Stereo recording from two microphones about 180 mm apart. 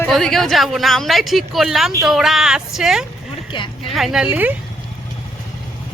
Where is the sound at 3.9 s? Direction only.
Centre (ahead or behind).